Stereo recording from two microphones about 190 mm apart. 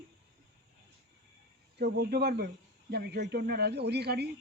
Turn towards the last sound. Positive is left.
turn(degrees=-60)  # may be behind; listen again after turning